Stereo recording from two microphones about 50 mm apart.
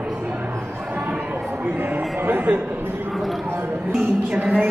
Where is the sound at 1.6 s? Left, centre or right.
Right.